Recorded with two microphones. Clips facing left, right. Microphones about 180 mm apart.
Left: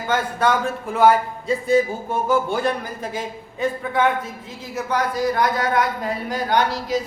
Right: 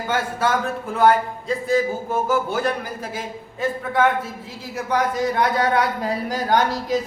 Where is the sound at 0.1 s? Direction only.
5° right (ahead or behind).